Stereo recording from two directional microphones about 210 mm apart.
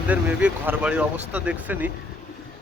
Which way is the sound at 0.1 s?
5° right (ahead or behind).